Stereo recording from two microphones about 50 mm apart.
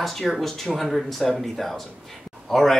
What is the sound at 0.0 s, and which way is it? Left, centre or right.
Speech, centre.